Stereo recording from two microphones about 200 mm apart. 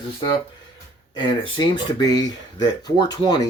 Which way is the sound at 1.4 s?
25° left (ahead or behind).